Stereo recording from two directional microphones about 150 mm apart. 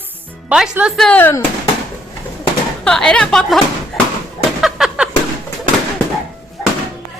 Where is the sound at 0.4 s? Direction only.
5° right (ahead or behind); by 1.4 s 10° left (ahead or behind).